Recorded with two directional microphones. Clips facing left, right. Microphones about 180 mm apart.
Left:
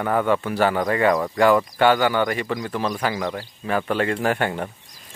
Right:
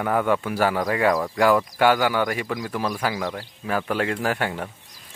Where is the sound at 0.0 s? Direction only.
5° right (ahead or behind).